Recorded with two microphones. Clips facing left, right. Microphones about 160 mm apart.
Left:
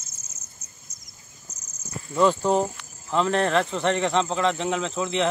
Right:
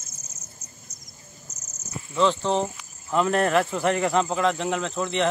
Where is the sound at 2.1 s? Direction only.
10° left (ahead or behind).